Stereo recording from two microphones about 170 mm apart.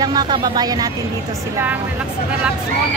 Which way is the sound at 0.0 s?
25° right (ahead or behind).